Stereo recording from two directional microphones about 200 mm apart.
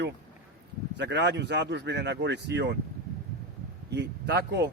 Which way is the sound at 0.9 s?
60° right (ahead or behind).